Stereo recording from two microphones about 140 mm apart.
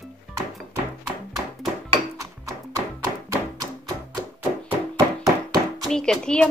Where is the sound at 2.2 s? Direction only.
25° right (ahead or behind).